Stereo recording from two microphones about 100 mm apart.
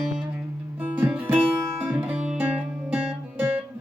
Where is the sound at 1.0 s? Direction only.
20° right (ahead or behind).